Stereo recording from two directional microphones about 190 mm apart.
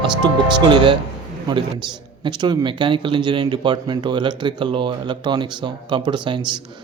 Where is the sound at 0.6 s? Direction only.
25° right (ahead or behind).